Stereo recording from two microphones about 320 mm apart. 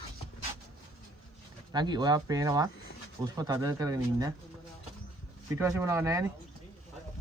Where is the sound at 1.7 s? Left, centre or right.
Centre.